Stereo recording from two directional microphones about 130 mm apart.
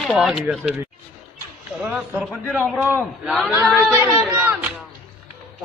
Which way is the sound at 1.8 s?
15° right (ahead or behind).